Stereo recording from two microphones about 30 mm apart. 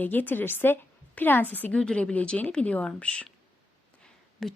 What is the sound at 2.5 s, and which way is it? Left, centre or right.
Speech, left.